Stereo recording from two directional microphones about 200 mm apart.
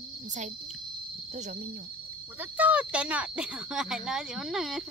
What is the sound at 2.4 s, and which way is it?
Speech, 5° right (ahead or behind).